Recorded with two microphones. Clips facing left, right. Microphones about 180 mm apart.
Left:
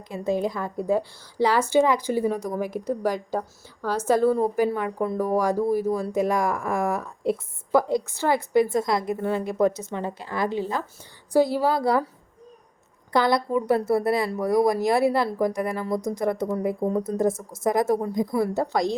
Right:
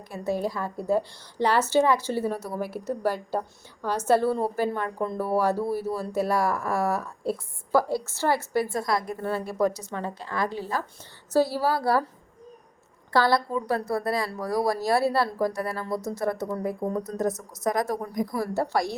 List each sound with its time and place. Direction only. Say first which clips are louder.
0.1 s speech: left 3 dB; 20° left (ahead or behind)
13.1 s speech: left 2 dB; 20° left (ahead or behind)